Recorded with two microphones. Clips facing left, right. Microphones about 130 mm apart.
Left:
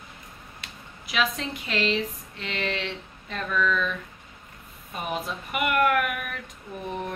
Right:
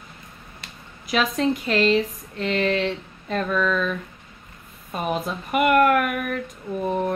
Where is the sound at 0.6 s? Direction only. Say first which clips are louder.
Right 1 dB; 40° right (ahead or behind).